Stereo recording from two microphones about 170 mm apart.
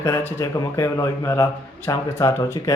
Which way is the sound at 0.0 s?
15° left (ahead or behind).